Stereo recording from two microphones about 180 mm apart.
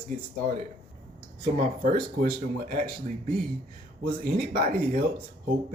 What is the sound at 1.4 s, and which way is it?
Speech, 45° right (ahead or behind).